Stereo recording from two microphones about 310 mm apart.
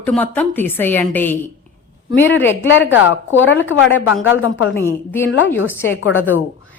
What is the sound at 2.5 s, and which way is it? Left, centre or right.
A woman's voice, left.